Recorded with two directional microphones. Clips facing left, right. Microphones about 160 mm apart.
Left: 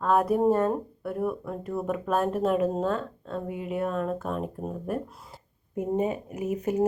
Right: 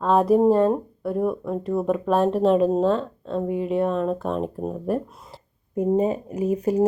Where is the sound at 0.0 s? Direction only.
25° right (ahead or behind).